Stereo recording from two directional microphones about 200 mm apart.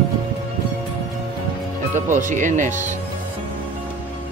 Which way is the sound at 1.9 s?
40° right (ahead or behind).